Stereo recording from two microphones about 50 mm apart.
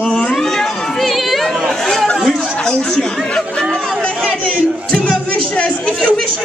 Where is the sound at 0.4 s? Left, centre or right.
Centre.